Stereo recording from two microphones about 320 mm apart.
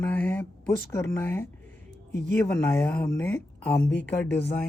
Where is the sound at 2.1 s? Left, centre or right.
Left.